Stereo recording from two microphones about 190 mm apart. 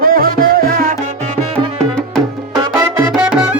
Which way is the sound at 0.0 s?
50° right (ahead or behind).